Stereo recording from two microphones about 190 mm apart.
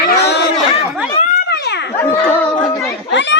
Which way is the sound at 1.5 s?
60° left (ahead or behind).